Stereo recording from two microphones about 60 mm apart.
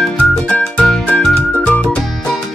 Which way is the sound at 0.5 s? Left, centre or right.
Left.